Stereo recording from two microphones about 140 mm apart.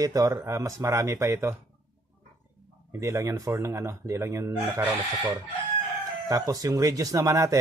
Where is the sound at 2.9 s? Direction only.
20° right (ahead or behind).